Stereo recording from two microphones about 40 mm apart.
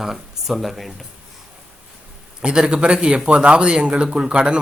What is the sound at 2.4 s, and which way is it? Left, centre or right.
A man's voice, right.